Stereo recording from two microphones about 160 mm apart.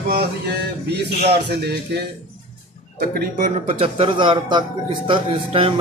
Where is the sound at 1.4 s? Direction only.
90° right.